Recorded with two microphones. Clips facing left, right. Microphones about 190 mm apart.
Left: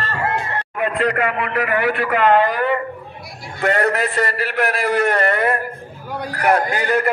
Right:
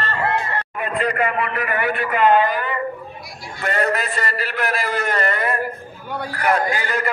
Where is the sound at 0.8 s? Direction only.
70° left (ahead or behind).